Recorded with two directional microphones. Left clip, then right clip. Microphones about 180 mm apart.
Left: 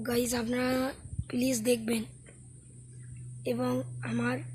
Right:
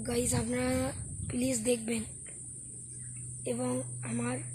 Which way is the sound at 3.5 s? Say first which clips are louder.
Left 3 dB; 10° left (ahead or behind).